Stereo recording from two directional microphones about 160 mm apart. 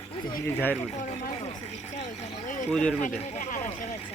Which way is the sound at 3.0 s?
50° left (ahead or behind).